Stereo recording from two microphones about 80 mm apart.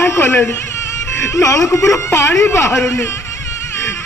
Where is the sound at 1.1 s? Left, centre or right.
Left.